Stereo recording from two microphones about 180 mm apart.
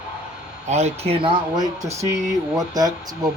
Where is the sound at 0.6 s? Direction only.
40° right (ahead or behind).